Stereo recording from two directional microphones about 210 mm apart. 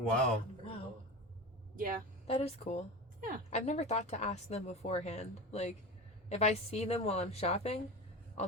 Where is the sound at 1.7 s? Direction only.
40° right (ahead or behind).